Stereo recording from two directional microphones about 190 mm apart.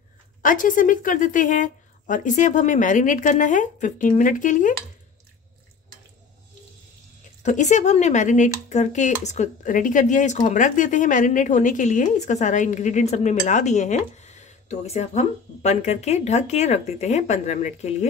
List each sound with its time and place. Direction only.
0.4 s a woman's voice: 45° left (ahead or behind)
7.4 s speech: 40° left (ahead or behind)